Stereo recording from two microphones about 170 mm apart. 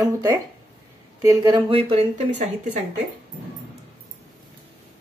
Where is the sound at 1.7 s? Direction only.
35° right (ahead or behind).